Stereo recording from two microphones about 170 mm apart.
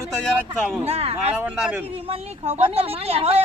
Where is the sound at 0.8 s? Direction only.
35° right (ahead or behind).